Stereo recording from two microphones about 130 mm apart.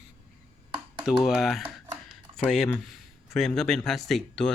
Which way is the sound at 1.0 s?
5° right (ahead or behind).